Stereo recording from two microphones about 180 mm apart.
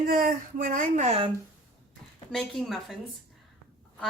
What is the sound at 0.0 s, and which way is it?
Speech, 55° right (ahead or behind).